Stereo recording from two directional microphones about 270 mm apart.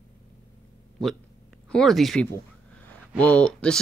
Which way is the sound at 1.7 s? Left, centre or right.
Centre.